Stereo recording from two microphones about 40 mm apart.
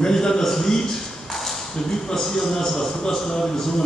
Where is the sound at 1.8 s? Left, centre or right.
Centre.